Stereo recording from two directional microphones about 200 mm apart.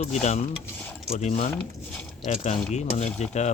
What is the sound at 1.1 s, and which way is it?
Speech, 35° left (ahead or behind).